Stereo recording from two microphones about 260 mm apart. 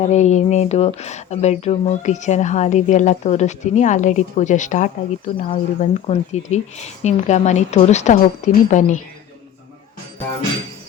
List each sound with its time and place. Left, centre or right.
0.1 s a woman's voice: left